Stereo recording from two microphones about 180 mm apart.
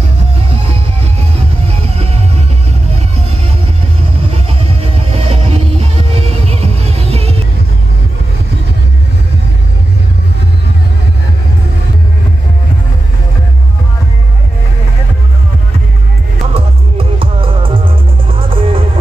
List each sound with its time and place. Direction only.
0.4 s music: 35° right (ahead or behind)
3.2 s vehicle: 35° right (ahead or behind)
4.3 s music: 35° right (ahead or behind)
16.5 s music: 30° right (ahead or behind)